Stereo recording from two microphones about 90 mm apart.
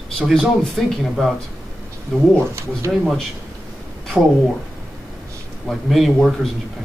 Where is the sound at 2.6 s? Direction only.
30° right (ahead or behind).